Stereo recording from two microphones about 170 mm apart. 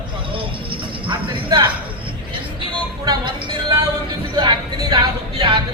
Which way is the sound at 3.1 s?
25° right (ahead or behind).